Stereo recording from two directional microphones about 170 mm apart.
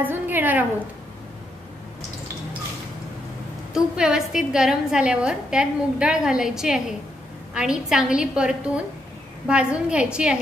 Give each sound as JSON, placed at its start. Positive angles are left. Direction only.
{"t": 0.0, "sound": "a woman's voice", "side_deg": -10}
{"t": 3.7, "sound": "a woman's voice", "side_deg": -5}